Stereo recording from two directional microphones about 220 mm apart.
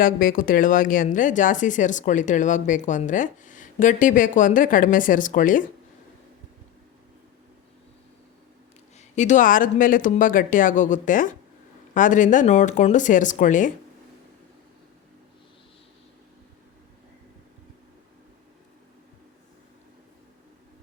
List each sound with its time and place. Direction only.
0.0 s speech: 40° left (ahead or behind)
9.0 s speech: 35° left (ahead or behind)